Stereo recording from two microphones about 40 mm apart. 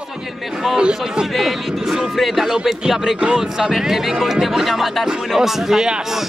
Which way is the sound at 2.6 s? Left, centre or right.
Centre.